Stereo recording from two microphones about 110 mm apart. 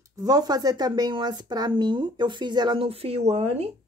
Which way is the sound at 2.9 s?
65° right (ahead or behind).